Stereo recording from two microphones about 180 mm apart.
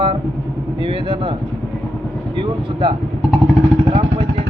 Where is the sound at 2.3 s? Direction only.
25° right (ahead or behind).